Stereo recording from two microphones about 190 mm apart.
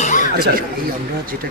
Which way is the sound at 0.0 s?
40° left (ahead or behind).